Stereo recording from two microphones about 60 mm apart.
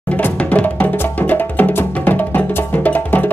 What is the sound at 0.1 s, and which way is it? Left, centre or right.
Music, left.